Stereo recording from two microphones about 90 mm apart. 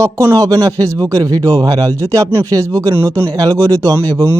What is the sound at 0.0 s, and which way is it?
Speech, 30° right (ahead or behind).